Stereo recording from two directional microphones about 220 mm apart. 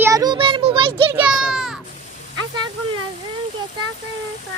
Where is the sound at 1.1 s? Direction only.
5° right (ahead or behind).